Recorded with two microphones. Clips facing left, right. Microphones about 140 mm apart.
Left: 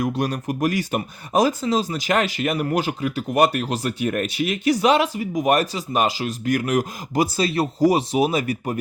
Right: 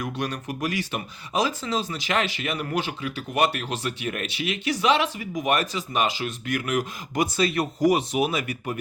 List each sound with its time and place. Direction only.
0.0 s speech: 40° left (ahead or behind)